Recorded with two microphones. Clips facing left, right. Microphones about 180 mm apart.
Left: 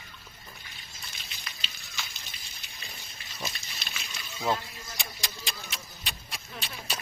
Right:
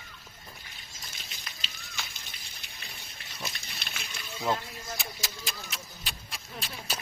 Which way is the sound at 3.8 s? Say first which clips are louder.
Right 1 dB; 55° right (ahead or behind).